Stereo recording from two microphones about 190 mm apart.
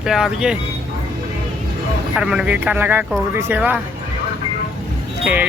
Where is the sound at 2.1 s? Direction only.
5° right (ahead or behind).